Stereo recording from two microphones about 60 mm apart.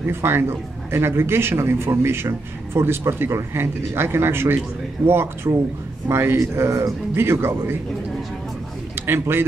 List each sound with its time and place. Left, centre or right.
0.0 s a man's voice: right
7.2 s speech: right
9.0 s a man's voice: right